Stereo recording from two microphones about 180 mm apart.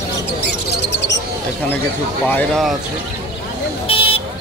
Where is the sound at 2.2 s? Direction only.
5° left (ahead or behind).